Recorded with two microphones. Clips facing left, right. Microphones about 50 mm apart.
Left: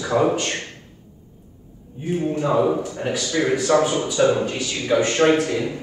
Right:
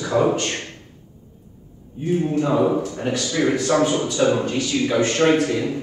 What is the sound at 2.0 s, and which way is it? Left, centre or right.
A man's voice, centre.